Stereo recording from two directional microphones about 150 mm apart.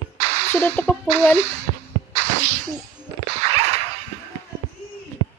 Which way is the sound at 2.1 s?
55° right (ahead or behind).